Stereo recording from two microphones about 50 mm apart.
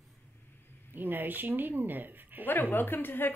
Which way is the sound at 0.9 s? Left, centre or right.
Right.